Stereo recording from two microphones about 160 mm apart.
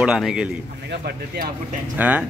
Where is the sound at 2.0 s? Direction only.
10° right (ahead or behind).